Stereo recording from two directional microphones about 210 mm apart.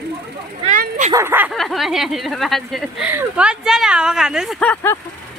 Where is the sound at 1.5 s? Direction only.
Centre (ahead or behind).